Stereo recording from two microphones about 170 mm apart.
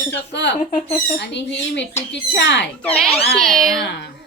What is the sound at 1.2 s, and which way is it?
Speech, 90° left.